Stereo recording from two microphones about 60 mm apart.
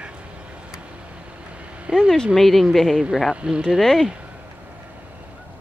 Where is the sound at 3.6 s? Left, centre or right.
Centre.